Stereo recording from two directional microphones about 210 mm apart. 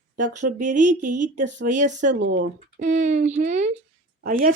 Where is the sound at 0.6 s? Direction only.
35° right (ahead or behind).